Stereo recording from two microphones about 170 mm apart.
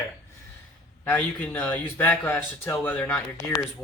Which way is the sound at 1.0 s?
10° left (ahead or behind).